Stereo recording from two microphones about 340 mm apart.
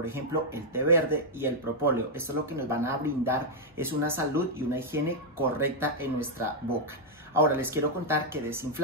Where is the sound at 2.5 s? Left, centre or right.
Centre.